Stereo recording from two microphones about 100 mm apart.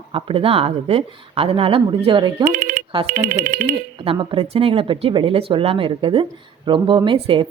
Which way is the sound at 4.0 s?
55° right (ahead or behind).